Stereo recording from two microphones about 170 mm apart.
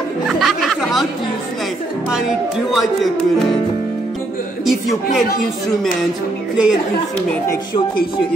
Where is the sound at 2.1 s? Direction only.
5° right (ahead or behind).